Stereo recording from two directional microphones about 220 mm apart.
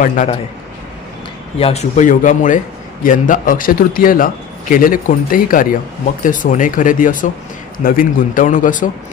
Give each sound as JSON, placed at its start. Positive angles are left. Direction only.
{"t": 0.0, "sound": "a man's voice", "side_deg": 35}
{"t": 1.6, "sound": "a man's voice", "side_deg": 30}